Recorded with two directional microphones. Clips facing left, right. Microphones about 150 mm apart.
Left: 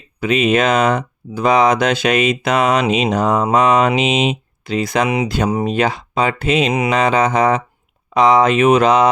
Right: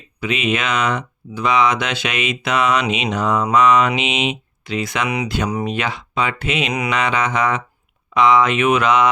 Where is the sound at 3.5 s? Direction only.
45° left (ahead or behind).